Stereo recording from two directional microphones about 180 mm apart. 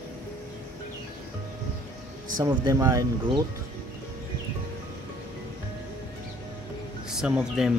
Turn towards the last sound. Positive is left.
turn(degrees=-5)  # may be behind; listen again after turning